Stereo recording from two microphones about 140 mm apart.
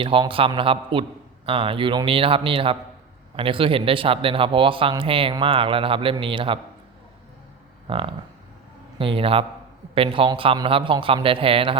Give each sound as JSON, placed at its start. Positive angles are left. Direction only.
{"t": 0.0, "sound": "speech", "side_deg": -35}
{"t": 7.9, "sound": "a sound", "side_deg": -40}
{"t": 9.0, "sound": "speech", "side_deg": -40}